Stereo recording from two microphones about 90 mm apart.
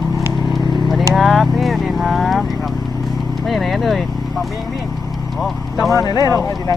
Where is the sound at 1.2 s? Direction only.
Centre (ahead or behind).